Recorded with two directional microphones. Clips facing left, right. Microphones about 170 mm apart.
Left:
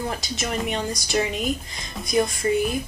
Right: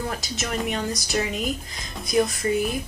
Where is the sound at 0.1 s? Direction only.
Centre (ahead or behind).